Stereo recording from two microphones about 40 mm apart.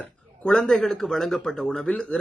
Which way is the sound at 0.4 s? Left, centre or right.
Left.